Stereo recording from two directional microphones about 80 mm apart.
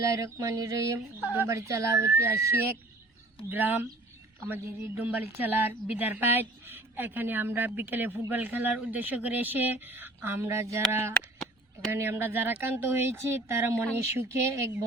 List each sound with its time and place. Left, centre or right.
0.0 s a sound: right
1.5 s speech: right
3.5 s a woman's voice: right
11.9 s a woman's voice: right